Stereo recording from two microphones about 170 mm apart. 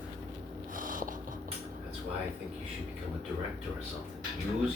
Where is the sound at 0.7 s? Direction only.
50° right (ahead or behind).